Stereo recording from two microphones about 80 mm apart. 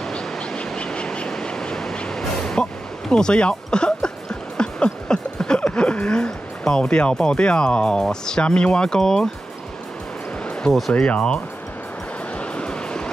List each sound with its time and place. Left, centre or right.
0.0 s a sound: centre
10.4 s music: centre
10.9 s speech: centre
12.4 s vehicle: centre